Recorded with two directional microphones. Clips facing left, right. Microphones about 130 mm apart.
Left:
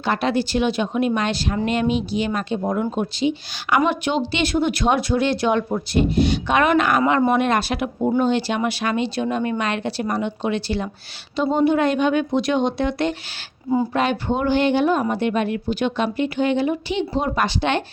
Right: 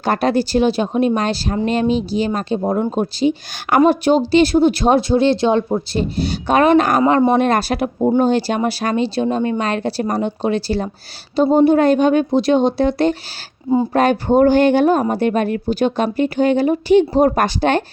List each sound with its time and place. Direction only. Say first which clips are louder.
0.0 s speech: right 4 dB; 40° right (ahead or behind)